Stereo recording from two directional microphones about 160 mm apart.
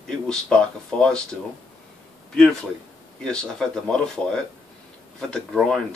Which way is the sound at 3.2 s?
5° left (ahead or behind).